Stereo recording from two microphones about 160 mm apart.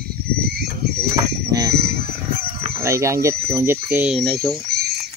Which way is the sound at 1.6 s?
80° right.